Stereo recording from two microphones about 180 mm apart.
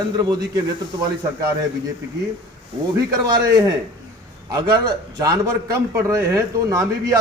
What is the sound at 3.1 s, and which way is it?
A man's voice, 20° right (ahead or behind).